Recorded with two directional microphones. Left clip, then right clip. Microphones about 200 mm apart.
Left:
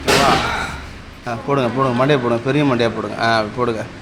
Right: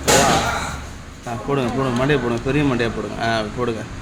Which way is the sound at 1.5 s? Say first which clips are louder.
Left 4 dB; 10° left (ahead or behind).